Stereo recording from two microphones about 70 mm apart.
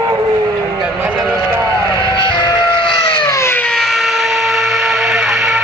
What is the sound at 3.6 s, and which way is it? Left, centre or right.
Vehicle, centre.